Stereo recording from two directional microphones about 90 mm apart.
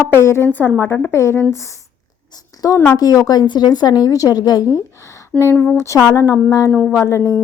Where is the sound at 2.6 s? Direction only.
40° left (ahead or behind).